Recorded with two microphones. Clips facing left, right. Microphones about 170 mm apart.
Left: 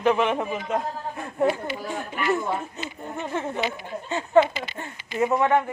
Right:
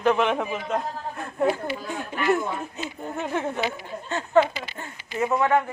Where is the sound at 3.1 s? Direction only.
5° right (ahead or behind).